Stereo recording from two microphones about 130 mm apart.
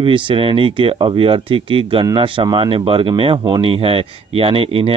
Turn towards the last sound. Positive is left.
turn(degrees=-45)  # may be behind; listen again after turning